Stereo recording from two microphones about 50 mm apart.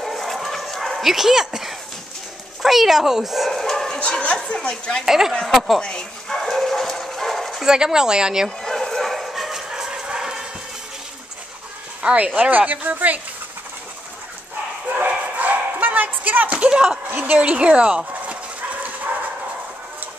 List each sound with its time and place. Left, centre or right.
0.0 s dog: centre
2.6 s speech: centre
5.0 s speech: centre
5.8 s dog: centre
7.6 s speech: centre
8.6 s bow-wow: centre
12.0 s a woman's voice: right
15.0 s bow-wow: right
17.1 s dog: right